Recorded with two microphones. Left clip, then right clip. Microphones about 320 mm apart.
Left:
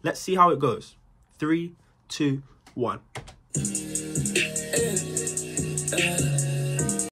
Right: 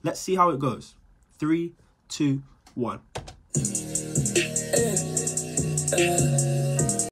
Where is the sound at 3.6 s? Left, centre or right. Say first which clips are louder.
Even; right.